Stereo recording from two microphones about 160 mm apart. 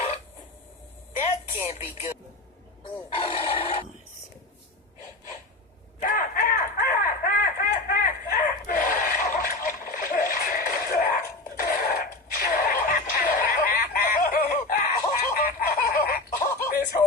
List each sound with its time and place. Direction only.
1.2 s music: 45° left (ahead or behind)
2.8 s chicken: 35° left (ahead or behind)
6.0 s a sound: 60° left (ahead or behind)